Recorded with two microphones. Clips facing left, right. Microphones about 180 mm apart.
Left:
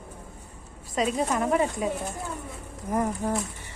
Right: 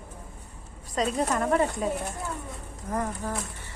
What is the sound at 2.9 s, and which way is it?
Speech, 15° left (ahead or behind).